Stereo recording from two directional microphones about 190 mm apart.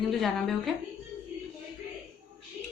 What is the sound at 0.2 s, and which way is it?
Speech, centre (ahead or behind).